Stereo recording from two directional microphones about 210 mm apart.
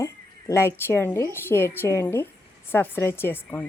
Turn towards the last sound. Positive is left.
turn(degrees=10)  # may be behind; listen again after turning